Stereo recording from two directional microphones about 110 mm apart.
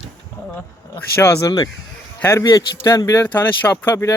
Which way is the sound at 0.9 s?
20° left (ahead or behind).